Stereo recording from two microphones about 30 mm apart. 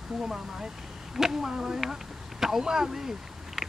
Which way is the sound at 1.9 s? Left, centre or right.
Centre.